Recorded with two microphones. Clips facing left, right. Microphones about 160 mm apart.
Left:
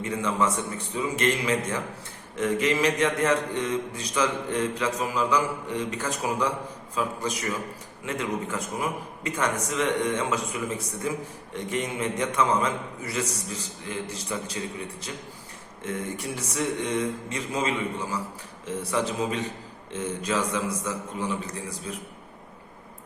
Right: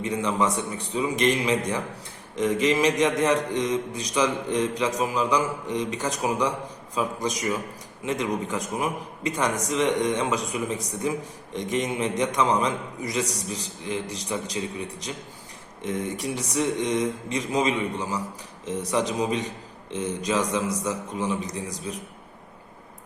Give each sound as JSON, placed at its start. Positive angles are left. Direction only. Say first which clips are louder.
{"t": 0.0, "sound": "a man's voice", "louder": "right 1 dB", "side_deg": -15}
{"t": 15.8, "sound": "a man's voice", "louder": "right 3 dB", "side_deg": -15}